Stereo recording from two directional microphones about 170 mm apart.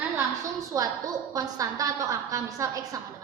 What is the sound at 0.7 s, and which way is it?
A woman's voice, 20° right (ahead or behind).